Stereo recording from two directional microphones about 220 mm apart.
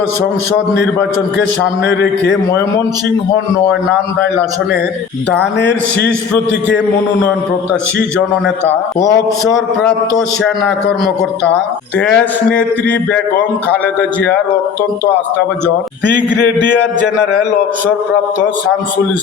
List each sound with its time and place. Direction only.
1.9 s a man's voice: 50° left (ahead or behind)
5.5 s a man's voice: 50° left (ahead or behind)
11.9 s a man's voice: 5° left (ahead or behind)
16.0 s a sound: 10° left (ahead or behind)